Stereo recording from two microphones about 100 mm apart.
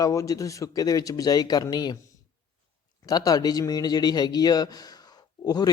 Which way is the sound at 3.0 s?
40° left (ahead or behind).